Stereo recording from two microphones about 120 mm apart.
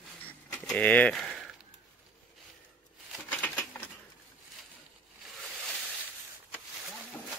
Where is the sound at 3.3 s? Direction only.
10° left (ahead or behind).